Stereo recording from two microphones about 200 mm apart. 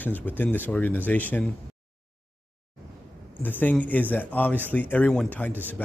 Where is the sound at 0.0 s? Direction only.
10° left (ahead or behind).